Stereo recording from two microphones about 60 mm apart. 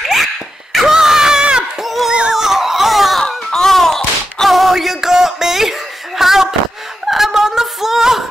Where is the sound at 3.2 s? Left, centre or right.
Centre.